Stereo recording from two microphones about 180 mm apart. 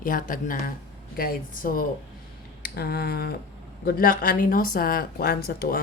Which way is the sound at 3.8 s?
50° left (ahead or behind).